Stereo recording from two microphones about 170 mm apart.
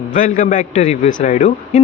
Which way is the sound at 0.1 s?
50° left (ahead or behind).